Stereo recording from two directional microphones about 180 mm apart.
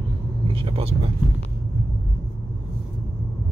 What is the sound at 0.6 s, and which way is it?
Speech, 30° right (ahead or behind).